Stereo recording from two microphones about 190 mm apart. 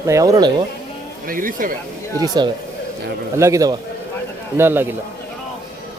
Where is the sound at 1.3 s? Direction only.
45° right (ahead or behind).